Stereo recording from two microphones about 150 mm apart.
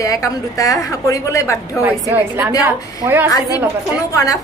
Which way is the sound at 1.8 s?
15° right (ahead or behind).